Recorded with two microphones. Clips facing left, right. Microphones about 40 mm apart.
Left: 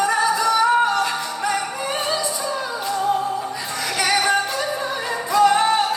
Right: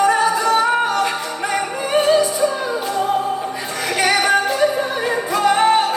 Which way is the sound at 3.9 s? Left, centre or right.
Right.